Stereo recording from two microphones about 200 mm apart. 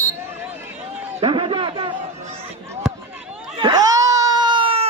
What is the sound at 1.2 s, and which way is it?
Speech, 25° right (ahead or behind).